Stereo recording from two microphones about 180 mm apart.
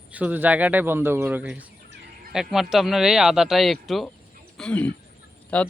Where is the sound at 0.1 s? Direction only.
10° right (ahead or behind).